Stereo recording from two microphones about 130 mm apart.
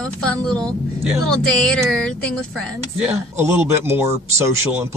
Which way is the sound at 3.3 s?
20° right (ahead or behind).